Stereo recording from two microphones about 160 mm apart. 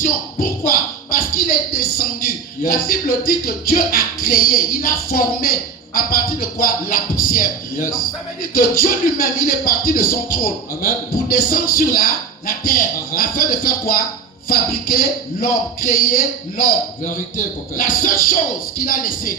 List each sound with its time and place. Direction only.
0.0 s speech: 65° left (ahead or behind)